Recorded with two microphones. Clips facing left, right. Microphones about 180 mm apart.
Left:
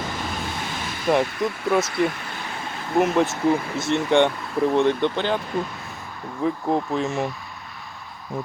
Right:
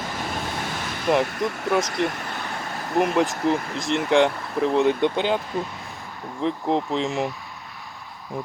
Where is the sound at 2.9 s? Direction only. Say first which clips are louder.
Left 1 dB; centre (ahead or behind).